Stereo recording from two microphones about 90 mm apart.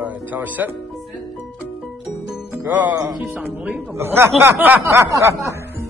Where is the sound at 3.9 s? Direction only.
25° right (ahead or behind).